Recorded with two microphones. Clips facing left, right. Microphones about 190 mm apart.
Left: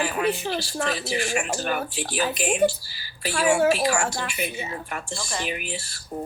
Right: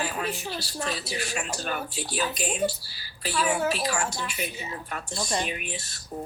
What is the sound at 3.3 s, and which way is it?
A woman's voice, 80° left.